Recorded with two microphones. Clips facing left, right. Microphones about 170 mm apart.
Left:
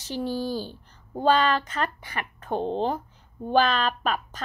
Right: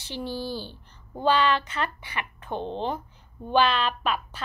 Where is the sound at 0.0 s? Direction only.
40° left (ahead or behind).